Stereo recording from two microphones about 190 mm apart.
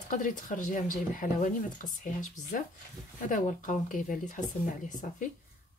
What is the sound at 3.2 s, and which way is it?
Speech, 45° left (ahead or behind).